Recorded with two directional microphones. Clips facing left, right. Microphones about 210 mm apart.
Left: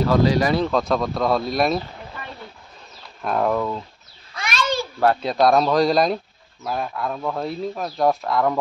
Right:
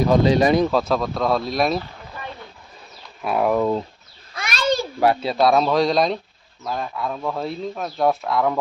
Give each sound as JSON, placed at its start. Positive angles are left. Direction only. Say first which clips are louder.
{"t": 0.0, "sound": "speech", "louder": "right 2 dB", "side_deg": -20}
{"t": 0.7, "sound": "speech", "louder": "even", "side_deg": -5}
{"t": 3.2, "sound": "speech", "louder": "right 2 dB", "side_deg": -5}
{"t": 4.5, "sound": "a sound", "louder": "right 3 dB", "side_deg": -40}
{"t": 5.0, "sound": "speech", "louder": "even", "side_deg": -5}